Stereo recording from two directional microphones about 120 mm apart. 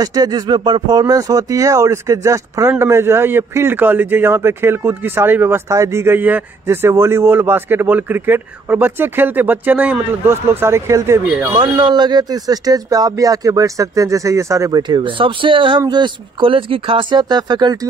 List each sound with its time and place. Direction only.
0.0 s a man's voice: 30° right (ahead or behind)
11.5 s speech: 40° right (ahead or behind)
14.8 s speech: 40° right (ahead or behind)